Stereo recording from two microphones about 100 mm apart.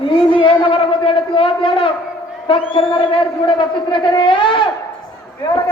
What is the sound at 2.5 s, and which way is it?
A man's voice, 60° left (ahead or behind).